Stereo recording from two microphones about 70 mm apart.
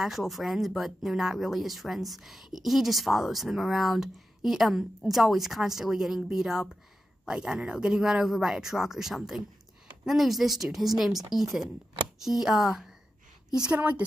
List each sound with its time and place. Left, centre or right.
0.0 s speech: centre
13.7 s a woman's voice: right